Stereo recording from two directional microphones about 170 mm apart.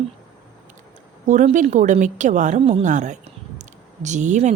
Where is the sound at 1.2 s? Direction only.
45° right (ahead or behind).